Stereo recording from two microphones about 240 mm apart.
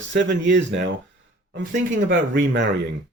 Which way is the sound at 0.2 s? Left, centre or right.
Right.